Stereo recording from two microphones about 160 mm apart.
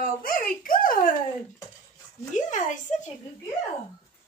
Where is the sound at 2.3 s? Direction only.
50° left (ahead or behind).